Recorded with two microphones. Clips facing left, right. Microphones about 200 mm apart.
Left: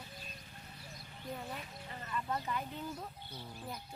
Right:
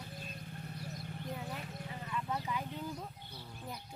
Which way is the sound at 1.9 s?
5° right (ahead or behind).